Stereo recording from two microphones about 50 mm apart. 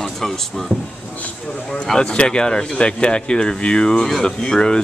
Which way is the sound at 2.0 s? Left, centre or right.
Centre.